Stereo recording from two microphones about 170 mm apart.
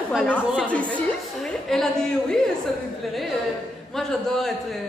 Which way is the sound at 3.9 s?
Centre (ahead or behind).